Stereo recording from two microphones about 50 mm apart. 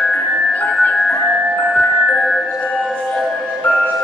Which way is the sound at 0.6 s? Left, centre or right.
Left.